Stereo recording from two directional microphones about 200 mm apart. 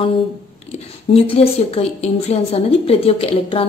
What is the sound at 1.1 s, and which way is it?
A woman's voice, 30° left (ahead or behind).